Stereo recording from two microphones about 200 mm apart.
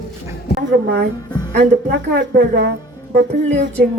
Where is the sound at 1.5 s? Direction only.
60° right (ahead or behind).